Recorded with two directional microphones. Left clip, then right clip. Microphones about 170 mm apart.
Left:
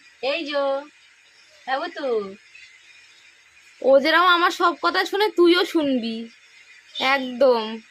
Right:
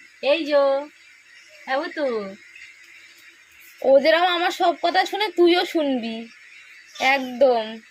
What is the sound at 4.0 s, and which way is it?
A woman's voice, 20° left (ahead or behind).